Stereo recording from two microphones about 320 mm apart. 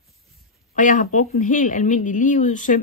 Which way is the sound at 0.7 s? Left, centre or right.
Left.